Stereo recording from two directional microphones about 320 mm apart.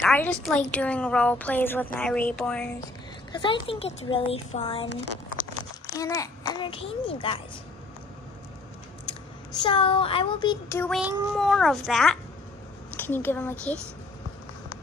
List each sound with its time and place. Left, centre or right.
0.0 s a woman's voice: centre
3.3 s a child's voice: centre
5.9 s a child's voice: centre
9.6 s a woman's voice: centre